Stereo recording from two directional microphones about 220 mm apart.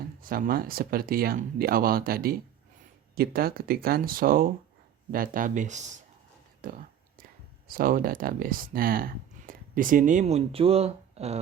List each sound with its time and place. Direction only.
0.2 s speech: 40° right (ahead or behind)
6.6 s whispering: 40° right (ahead or behind)
7.7 s speech: 40° right (ahead or behind)